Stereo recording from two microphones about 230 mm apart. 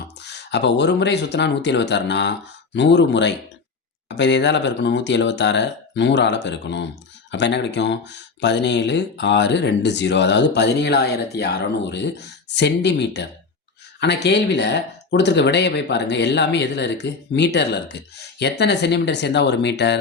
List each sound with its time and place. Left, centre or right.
0.2 s speech: left